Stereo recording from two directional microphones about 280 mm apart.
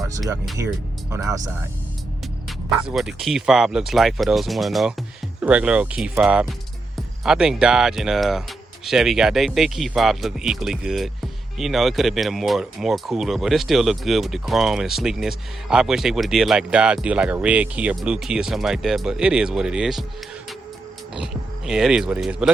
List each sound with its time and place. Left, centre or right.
1.1 s speech: centre
2.9 s speech: centre
21.2 s speech: centre